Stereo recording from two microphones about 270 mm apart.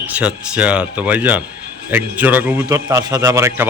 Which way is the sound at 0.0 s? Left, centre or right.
Centre.